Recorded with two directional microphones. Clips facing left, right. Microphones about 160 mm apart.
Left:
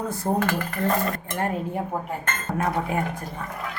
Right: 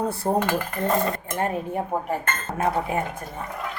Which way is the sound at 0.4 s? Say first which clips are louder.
Even; 25° right (ahead or behind).